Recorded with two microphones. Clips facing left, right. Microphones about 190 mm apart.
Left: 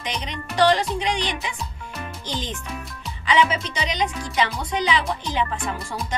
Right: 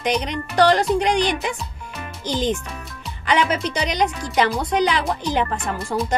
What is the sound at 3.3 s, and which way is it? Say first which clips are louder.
Speech: right 1 dB; 60° right (ahead or behind).